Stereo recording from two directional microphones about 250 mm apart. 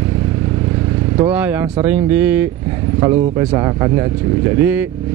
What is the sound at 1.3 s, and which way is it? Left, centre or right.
Speech, centre.